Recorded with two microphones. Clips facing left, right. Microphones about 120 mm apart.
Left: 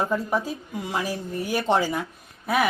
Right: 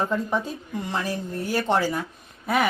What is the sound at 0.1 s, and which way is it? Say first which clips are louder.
A woman's voice: left 1 dB; 5° left (ahead or behind).